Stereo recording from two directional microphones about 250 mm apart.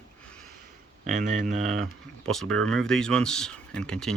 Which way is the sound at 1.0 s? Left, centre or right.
Right.